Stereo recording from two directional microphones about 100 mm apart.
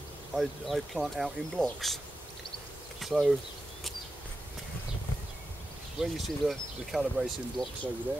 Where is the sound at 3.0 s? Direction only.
Centre (ahead or behind).